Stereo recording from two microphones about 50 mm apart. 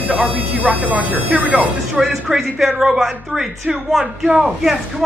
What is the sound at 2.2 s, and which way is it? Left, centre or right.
Speech, centre.